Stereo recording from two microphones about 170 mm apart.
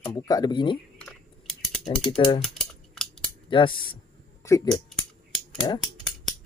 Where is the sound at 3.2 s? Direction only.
30° left (ahead or behind).